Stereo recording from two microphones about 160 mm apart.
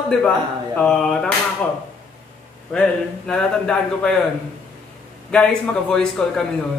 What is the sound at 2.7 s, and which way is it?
Speech, 5° left (ahead or behind).